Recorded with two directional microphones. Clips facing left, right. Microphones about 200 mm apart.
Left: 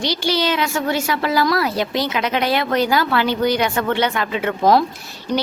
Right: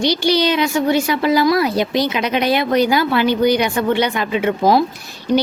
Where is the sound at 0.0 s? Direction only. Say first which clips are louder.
Right 4 dB; 15° right (ahead or behind).